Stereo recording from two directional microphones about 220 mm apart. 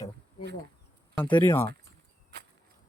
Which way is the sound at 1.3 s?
20° left (ahead or behind).